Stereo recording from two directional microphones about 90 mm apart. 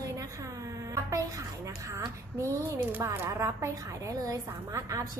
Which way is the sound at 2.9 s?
20° right (ahead or behind).